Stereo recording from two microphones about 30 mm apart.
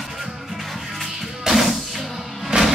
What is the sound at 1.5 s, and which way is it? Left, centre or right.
Music, centre.